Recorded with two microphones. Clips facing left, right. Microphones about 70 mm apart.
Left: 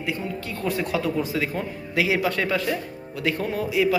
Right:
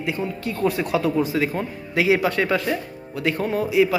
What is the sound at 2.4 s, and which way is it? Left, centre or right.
Speech, right.